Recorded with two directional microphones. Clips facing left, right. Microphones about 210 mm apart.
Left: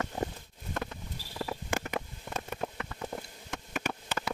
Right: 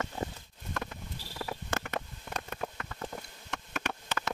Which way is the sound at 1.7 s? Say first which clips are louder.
Left 2 dB; 10° left (ahead or behind).